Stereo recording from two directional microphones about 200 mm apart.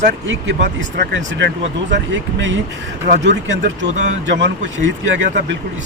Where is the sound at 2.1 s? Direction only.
65° right (ahead or behind).